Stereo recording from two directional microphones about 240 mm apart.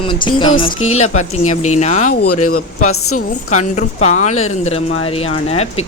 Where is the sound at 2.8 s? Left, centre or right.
Left.